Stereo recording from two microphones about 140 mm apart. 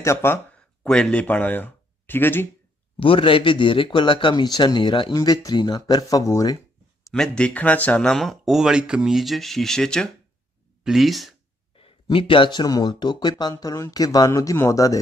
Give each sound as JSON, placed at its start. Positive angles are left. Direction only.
{"t": 0.0, "sound": "speech", "side_deg": 20}
{"t": 3.0, "sound": "speech", "side_deg": 40}
{"t": 7.1, "sound": "speech", "side_deg": 5}
{"t": 11.7, "sound": "speech", "side_deg": 40}